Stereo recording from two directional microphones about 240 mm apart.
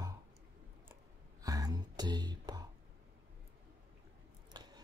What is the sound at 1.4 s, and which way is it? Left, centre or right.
Speech, centre.